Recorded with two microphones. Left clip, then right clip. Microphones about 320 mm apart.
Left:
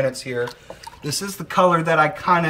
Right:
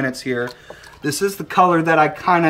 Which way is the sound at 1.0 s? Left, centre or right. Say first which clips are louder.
Right 8 dB; centre.